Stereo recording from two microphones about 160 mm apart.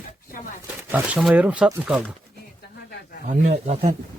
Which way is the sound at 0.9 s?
5° right (ahead or behind).